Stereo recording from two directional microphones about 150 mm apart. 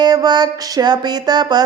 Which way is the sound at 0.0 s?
25° right (ahead or behind).